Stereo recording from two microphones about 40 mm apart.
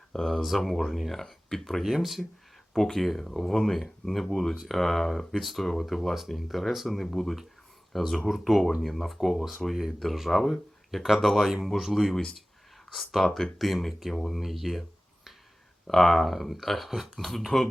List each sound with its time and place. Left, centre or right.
0.1 s speech: centre
1.8 s speech: centre
2.7 s speech: centre
11.4 s speech: centre
13.2 s speech: centre
13.6 s speech: centre